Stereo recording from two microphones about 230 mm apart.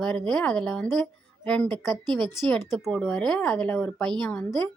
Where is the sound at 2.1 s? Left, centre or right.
Centre.